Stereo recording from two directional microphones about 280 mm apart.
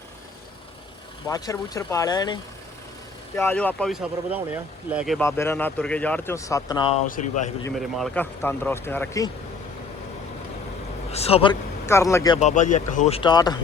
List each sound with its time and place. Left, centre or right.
1.3 s speech: centre
7.1 s speech: left
7.8 s speech: centre
11.1 s speech: left
11.9 s speech: centre
12.4 s speech: left